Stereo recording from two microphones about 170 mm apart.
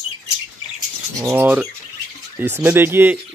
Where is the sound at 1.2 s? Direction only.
10° right (ahead or behind).